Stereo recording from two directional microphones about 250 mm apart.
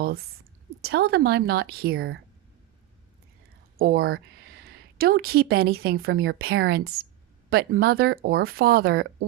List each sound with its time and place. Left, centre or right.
0.0 s a woman's voice: right
3.8 s speech: right